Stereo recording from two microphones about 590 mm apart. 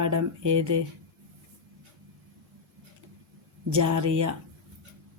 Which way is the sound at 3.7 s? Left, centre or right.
Right.